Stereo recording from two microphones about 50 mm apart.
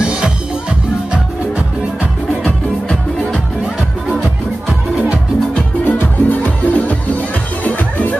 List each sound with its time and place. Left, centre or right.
2.4 s music: centre
5.9 s music: left